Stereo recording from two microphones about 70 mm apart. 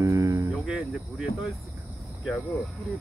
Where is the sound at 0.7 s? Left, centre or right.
Centre.